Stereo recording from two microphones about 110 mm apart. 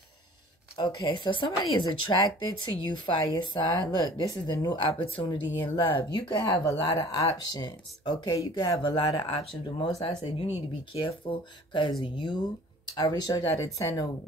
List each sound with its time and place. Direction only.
0.7 s speech: 45° left (ahead or behind)
4.9 s speech: 50° left (ahead or behind)
9.4 s speech: 60° left (ahead or behind)
12.9 s speech: 35° left (ahead or behind)